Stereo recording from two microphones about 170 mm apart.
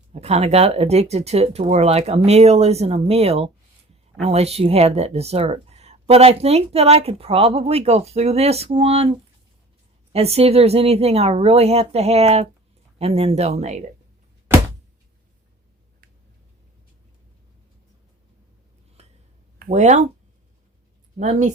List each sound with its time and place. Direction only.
0.1 s speech: 40° right (ahead or behind)
19.0 s a sound: 40° right (ahead or behind)
19.5 s speech: 50° right (ahead or behind)
21.2 s speech: 45° right (ahead or behind)